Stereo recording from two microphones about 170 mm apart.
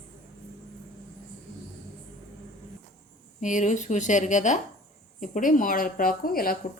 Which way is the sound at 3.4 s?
45° left (ahead or behind).